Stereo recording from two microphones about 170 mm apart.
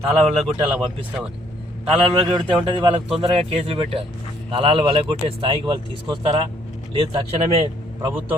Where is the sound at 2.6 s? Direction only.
30° right (ahead or behind).